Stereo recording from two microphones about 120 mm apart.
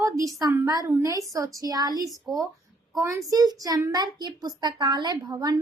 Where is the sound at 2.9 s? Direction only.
25° right (ahead or behind).